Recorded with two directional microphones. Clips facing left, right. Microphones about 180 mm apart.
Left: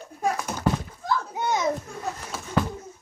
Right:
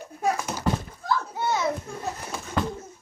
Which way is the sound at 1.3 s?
15° left (ahead or behind).